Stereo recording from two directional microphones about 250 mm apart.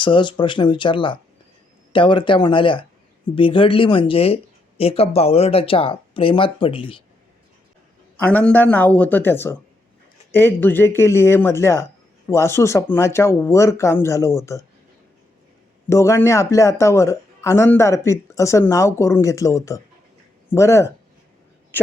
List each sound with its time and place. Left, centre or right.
0.0 s speech: centre
8.2 s speech: centre
15.9 s speech: centre